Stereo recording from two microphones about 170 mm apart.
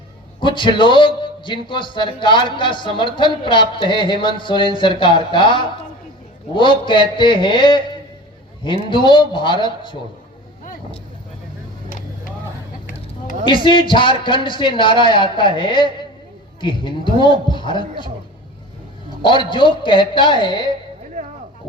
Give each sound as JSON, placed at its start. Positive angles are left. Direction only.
{"t": 0.3, "sound": "a man's voice", "side_deg": 30}
{"t": 13.4, "sound": "a man's voice", "side_deg": 30}
{"t": 19.5, "sound": "a man's voice", "side_deg": 30}